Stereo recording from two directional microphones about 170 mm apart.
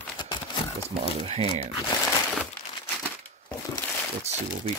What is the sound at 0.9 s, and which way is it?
Speech, 35° right (ahead or behind).